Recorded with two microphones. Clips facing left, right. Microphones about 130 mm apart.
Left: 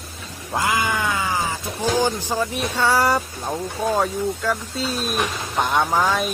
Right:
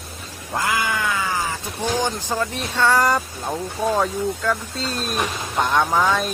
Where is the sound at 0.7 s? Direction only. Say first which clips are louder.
Left 1 dB; 20° left (ahead or behind).